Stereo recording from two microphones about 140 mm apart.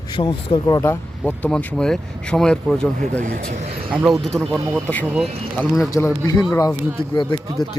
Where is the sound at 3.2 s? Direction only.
65° right (ahead or behind).